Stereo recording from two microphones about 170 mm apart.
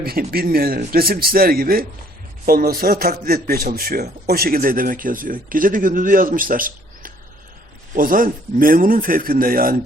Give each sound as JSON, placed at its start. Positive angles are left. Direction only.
{"t": 0.0, "sound": "a man's voice", "side_deg": -60}